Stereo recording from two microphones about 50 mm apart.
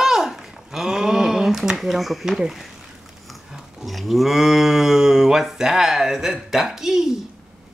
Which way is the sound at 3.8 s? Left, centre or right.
Centre.